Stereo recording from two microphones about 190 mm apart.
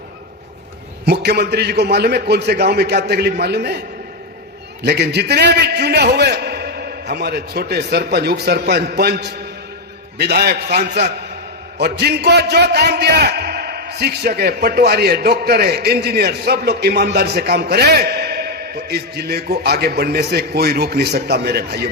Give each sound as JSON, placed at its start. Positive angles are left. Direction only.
{"t": 1.0, "sound": "a man's voice", "side_deg": -60}